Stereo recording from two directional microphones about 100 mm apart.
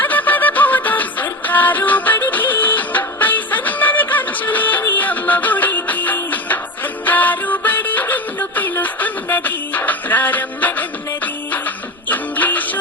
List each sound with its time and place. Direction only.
0.0 s music: 15° left (ahead or behind)
12.0 s music: 15° left (ahead or behind)